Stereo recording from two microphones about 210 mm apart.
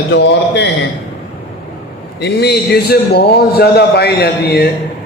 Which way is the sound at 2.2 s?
50° left (ahead or behind).